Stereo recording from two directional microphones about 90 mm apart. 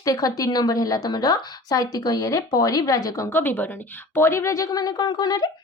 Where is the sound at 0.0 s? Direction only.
40° left (ahead or behind).